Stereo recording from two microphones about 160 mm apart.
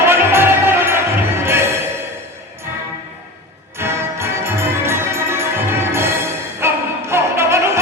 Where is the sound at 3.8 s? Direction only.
15° right (ahead or behind).